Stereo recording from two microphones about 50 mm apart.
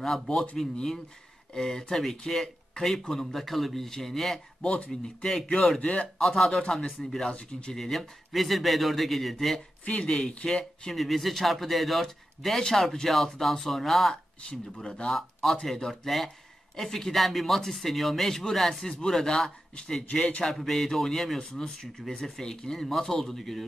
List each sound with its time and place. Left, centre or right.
0.7 s speech: centre
4.6 s speech: left
5.0 s speech: centre
5.8 s speech: left
6.1 s a man's voice: centre
7.2 s speech: centre
7.7 s a man's voice: centre
9.8 s speech: left
10.8 s a man's voice: centre
14.5 s speech: centre
15.0 s a man's voice: centre; by 20.4 s left
20.4 s speech: centre